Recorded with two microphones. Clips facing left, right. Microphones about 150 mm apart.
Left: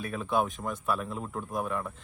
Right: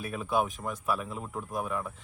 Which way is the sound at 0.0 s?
5° right (ahead or behind).